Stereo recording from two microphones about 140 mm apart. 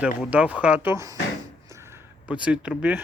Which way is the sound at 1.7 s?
15° right (ahead or behind).